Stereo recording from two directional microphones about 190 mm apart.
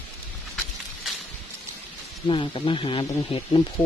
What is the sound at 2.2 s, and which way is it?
Speech, 25° left (ahead or behind).